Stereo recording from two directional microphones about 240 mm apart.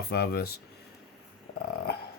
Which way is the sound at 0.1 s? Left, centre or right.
Left.